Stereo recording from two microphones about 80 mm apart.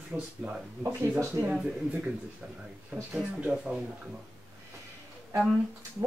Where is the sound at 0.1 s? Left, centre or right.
Right.